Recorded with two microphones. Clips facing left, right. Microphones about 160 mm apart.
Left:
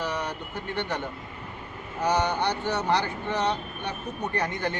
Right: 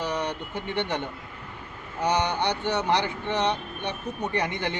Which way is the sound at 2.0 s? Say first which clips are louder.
Even; 20° right (ahead or behind).